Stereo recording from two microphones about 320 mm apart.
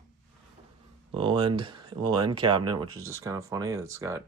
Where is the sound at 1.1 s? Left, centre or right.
Centre.